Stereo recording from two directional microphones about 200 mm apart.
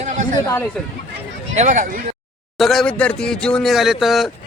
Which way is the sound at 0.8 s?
5° left (ahead or behind).